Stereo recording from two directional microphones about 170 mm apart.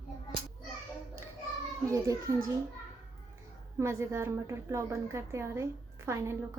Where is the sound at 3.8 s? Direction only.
15° right (ahead or behind).